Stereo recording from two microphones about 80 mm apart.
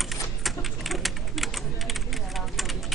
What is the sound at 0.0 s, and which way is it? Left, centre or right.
Typing, centre.